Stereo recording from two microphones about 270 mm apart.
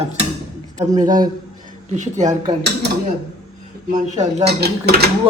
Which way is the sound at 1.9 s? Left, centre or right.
Right.